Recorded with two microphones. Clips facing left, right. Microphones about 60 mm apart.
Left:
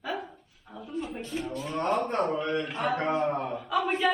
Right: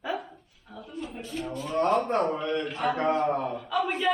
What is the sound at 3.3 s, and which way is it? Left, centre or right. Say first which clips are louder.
Speech: right 1 dB; centre.